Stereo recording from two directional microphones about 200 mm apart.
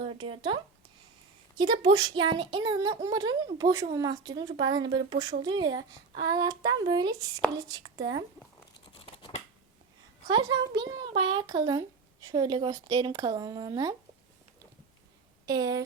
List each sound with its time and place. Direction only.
0.0 s speech: 25° right (ahead or behind)
9.0 s scissors: 30° left (ahead or behind)
10.8 s speech: 20° right (ahead or behind)
15.4 s speech: 20° right (ahead or behind)